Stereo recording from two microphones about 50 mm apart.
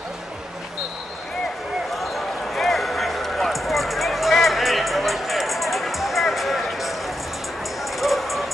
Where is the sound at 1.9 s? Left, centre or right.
Centre.